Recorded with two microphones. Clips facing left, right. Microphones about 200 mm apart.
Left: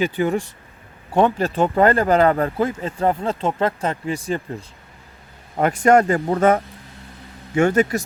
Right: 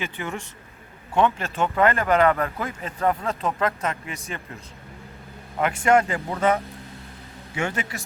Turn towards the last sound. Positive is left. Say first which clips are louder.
# left 12 dB
turn(degrees=45)  # may be behind; listen again after turning